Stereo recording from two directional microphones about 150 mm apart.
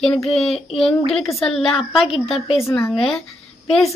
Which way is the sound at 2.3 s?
40° left (ahead or behind).